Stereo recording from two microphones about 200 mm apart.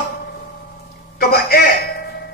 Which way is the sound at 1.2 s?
50° left (ahead or behind).